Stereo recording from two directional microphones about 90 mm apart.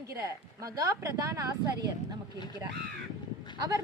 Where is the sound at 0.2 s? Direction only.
40° right (ahead or behind).